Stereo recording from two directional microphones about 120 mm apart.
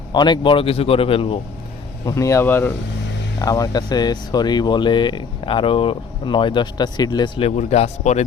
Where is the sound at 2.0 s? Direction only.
25° left (ahead or behind).